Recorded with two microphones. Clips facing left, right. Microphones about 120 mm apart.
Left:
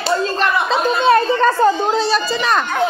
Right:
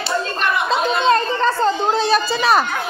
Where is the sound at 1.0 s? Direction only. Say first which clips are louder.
Left 5 dB; 15° left (ahead or behind).